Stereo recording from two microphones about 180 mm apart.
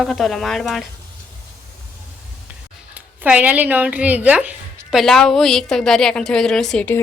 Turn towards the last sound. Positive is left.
turn(degrees=5)  # may be behind; listen again after turning